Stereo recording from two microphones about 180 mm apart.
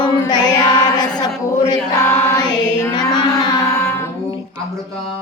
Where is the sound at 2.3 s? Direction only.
20° left (ahead or behind).